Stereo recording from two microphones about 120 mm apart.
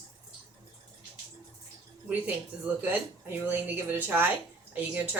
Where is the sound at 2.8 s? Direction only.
20° right (ahead or behind).